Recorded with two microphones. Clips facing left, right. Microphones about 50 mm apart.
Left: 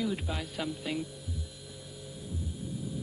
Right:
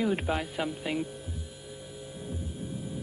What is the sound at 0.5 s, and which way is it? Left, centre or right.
Speech, right.